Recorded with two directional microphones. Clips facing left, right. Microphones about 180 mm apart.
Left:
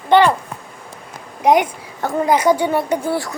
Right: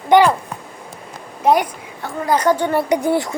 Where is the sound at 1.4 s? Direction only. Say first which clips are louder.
Left 1 dB; 15° left (ahead or behind).